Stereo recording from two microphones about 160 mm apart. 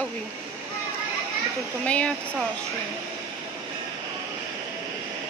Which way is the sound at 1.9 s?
10° left (ahead or behind).